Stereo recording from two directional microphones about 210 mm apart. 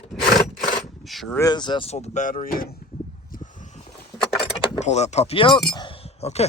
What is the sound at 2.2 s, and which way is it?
Speech, 35° left (ahead or behind).